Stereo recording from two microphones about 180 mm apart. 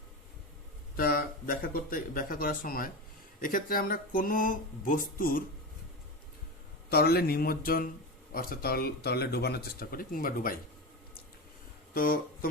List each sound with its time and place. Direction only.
0.9 s speech: 55° left (ahead or behind)
6.9 s speech: 60° left (ahead or behind)
11.9 s speech: 55° left (ahead or behind)